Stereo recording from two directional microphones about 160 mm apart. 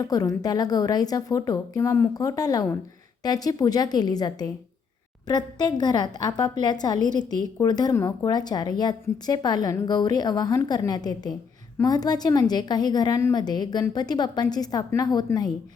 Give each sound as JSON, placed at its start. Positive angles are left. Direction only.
{"t": 0.0, "sound": "a woman's voice", "side_deg": 20}
{"t": 5.8, "sound": "a woman's voice", "side_deg": 25}